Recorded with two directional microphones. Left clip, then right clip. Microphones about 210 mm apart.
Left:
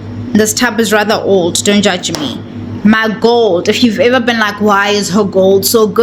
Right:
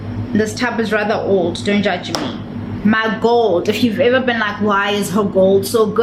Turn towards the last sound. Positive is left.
turn(degrees=45)  # may be behind; listen again after turning